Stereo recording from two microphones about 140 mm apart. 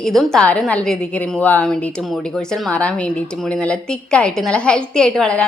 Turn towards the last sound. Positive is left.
turn(degrees=5)  # may be behind; listen again after turning